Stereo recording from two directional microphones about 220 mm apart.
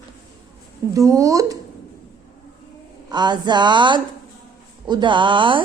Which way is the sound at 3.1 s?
20° right (ahead or behind).